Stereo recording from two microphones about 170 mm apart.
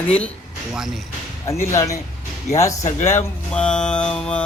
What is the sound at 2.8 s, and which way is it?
Speech, 40° left (ahead or behind).